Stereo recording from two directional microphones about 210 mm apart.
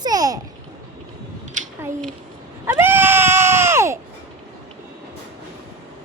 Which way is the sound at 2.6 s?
10° right (ahead or behind).